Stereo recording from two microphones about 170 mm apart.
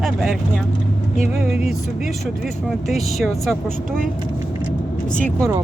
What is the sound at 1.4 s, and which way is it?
Speech, 5° right (ahead or behind).